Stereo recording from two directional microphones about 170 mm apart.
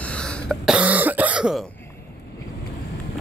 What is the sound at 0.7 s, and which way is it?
Throat clearing, 10° right (ahead or behind).